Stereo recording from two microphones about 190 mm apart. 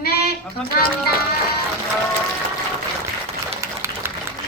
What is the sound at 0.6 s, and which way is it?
Speech, centre (ahead or behind).